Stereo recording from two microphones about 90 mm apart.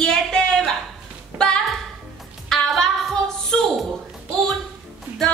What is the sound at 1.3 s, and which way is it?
Music, 20° right (ahead or behind).